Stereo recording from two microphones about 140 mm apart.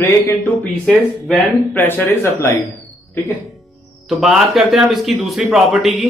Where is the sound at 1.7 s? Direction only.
15° left (ahead or behind).